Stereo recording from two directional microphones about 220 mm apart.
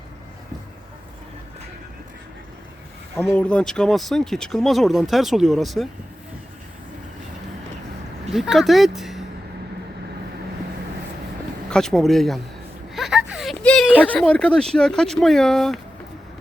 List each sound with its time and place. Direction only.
3.2 s speech: 5° left (ahead or behind)
8.3 s speech: centre (ahead or behind)
11.7 s speech: centre (ahead or behind)